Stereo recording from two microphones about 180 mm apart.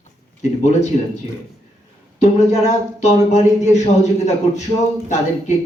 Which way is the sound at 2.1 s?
35° left (ahead or behind).